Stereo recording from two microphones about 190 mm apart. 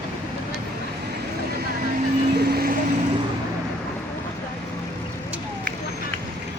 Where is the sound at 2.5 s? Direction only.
50° right (ahead or behind).